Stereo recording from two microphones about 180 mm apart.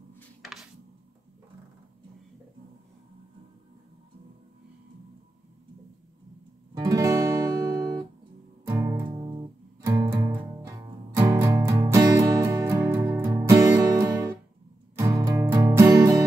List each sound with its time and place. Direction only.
6.8 s music: 20° right (ahead or behind)
9.0 s music: 25° right (ahead or behind)